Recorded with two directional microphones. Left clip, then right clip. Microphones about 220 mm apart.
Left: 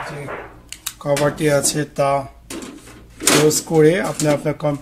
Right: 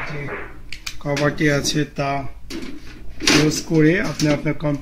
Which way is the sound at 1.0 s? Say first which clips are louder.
Left 2 dB; 45° left (ahead or behind).